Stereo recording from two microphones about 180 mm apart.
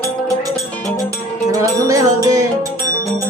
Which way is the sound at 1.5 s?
20° right (ahead or behind).